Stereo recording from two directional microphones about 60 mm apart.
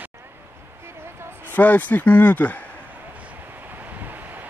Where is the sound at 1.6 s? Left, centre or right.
Left.